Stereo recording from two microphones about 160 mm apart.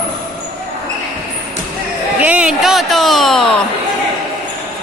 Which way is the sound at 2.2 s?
5° right (ahead or behind).